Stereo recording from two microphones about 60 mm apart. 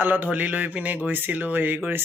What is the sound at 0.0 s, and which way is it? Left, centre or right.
Mantra, right.